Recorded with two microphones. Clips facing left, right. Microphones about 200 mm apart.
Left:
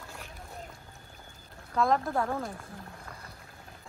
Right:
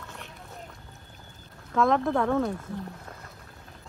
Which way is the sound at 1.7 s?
90° right.